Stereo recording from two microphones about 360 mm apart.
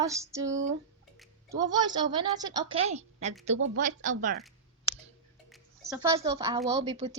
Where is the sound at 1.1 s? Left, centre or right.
Centre.